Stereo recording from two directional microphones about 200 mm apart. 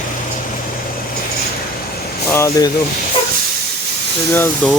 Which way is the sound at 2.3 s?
15° left (ahead or behind).